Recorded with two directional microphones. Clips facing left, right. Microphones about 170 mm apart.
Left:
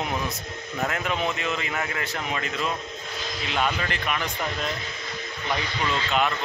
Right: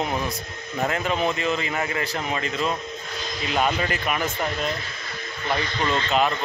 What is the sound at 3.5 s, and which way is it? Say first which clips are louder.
Speech: right 3 dB; 40° right (ahead or behind).